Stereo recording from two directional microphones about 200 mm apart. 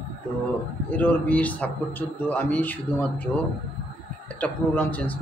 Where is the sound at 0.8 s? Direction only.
5° left (ahead or behind).